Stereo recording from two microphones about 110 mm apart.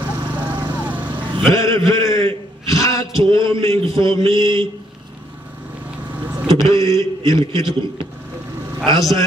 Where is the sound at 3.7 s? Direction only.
50° right (ahead or behind).